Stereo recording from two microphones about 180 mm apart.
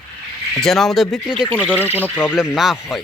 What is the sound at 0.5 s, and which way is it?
Speech, centre (ahead or behind).